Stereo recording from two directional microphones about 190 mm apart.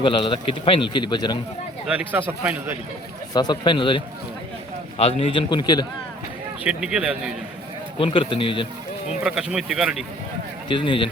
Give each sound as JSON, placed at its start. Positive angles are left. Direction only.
{"t": 0.0, "sound": "speech", "side_deg": 25}
{"t": 1.9, "sound": "a man's voice", "side_deg": -10}
{"t": 3.3, "sound": "speech", "side_deg": 20}
{"t": 6.7, "sound": "speech", "side_deg": -5}
{"t": 7.9, "sound": "speech", "side_deg": 25}
{"t": 9.2, "sound": "speech", "side_deg": -5}
{"t": 10.7, "sound": "speech", "side_deg": 25}